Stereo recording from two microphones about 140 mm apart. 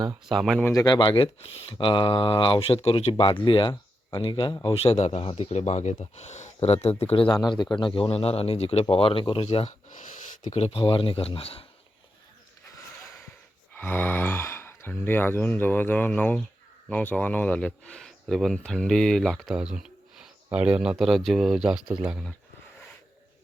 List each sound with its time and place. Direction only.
0.3 s speech: centre (ahead or behind)
0.6 s speech: 20° left (ahead or behind)
0.9 s speech: 35° left (ahead or behind)
9.9 s a sound: 65° left (ahead or behind)
10.6 s speech: 45° left (ahead or behind)
13.7 s speech: 15° left (ahead or behind); by 21.9 s 5° right (ahead or behind)